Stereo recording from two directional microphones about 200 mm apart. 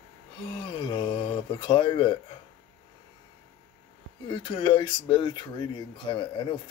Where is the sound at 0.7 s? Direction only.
25° left (ahead or behind).